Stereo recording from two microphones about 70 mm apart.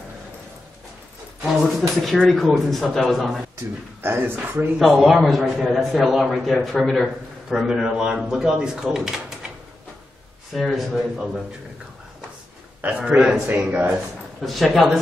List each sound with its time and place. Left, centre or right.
1.4 s a man's voice: centre
4.0 s speech: right
4.7 s a man's voice: centre
10.5 s a man's voice: centre
12.8 s a man's voice: centre
13.5 s speech: right
14.4 s a man's voice: centre